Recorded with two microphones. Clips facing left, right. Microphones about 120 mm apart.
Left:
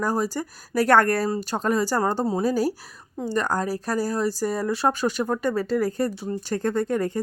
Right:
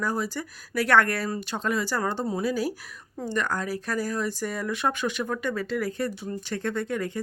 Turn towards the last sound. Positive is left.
turn(degrees=40)  # may be behind; listen again after turning